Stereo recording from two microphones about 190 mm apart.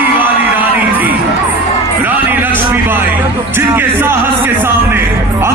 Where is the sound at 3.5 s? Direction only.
10° right (ahead or behind).